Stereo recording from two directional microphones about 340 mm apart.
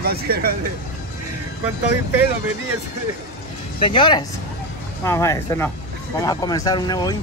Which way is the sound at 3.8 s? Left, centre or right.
Centre.